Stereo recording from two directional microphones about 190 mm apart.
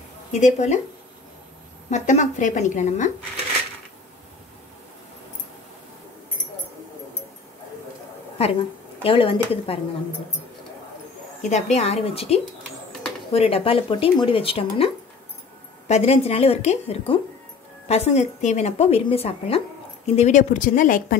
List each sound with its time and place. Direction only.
0.3 s a woman's voice: 40° left (ahead or behind)
1.9 s a woman's voice: 40° left (ahead or behind)
9.0 s speech: 30° left (ahead or behind)
11.4 s a woman's voice: 35° left (ahead or behind)
15.9 s a woman's voice: 35° left (ahead or behind)